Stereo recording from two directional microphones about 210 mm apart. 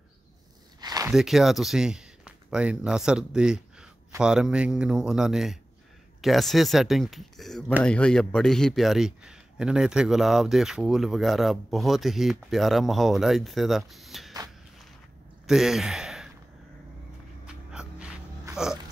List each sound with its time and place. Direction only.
0.7 s zipper: 20° right (ahead or behind)
1.1 s speech: centre (ahead or behind)
15.4 s speech: centre (ahead or behind)
17.5 s a sound: 5° right (ahead or behind)